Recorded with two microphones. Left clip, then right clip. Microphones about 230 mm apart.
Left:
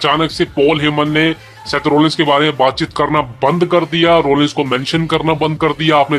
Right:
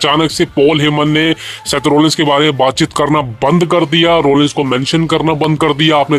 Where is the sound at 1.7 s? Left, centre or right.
Right.